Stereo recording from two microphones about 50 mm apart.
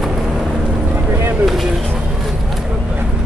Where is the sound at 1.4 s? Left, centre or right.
Centre.